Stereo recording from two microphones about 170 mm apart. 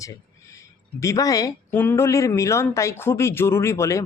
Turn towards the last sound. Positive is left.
turn(degrees=15)  # may be behind; listen again after turning